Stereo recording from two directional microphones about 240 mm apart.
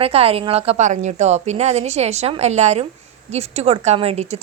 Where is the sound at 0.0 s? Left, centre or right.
Right.